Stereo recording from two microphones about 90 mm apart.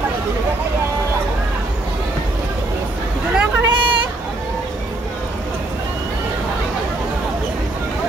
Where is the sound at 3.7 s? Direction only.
65° right (ahead or behind).